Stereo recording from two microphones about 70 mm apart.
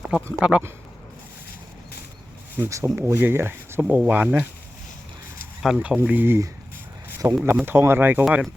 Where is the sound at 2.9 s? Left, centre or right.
Right.